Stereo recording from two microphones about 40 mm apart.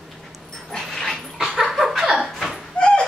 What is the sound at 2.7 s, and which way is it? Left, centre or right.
Door, left.